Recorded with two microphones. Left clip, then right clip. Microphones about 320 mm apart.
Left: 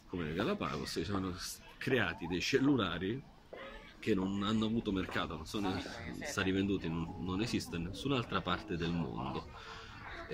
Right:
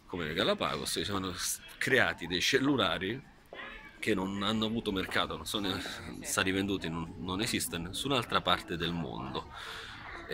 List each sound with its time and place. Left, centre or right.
0.2 s speech: centre